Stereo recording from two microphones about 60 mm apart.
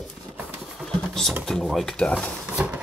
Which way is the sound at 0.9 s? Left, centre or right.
Centre.